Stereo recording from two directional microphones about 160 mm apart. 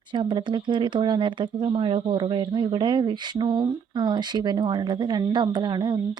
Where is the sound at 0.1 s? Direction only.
30° right (ahead or behind).